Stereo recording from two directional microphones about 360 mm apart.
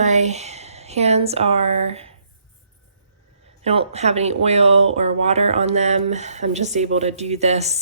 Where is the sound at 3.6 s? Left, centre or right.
Centre.